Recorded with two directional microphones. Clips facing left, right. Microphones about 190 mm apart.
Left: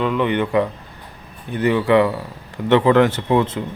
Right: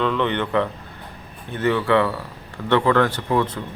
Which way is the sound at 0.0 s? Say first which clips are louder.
Left 3 dB; 10° left (ahead or behind).